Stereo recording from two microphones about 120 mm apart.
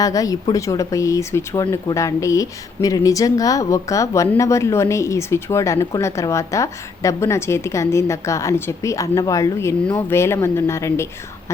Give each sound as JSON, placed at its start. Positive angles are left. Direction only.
{"t": 0.0, "sound": "speech", "side_deg": 30}